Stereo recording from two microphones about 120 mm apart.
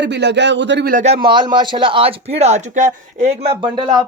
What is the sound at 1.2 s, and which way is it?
Speech, 40° right (ahead or behind).